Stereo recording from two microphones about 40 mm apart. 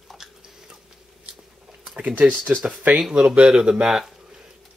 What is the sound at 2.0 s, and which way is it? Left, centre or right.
Speech, right.